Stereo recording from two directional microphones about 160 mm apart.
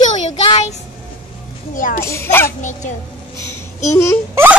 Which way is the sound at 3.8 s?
20° left (ahead or behind).